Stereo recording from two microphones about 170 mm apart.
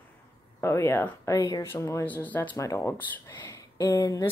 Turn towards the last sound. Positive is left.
turn(degrees=20)  # may be behind; listen again after turning